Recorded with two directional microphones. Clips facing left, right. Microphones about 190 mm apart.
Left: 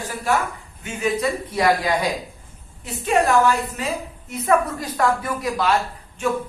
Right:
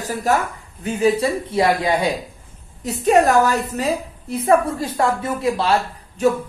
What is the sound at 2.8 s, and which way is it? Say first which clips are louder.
A woman's voice: right 5 dB; 40° right (ahead or behind).